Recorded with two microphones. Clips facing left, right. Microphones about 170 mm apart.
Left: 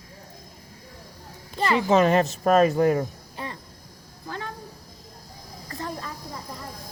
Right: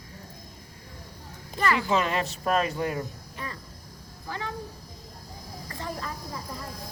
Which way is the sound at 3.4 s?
30° left (ahead or behind).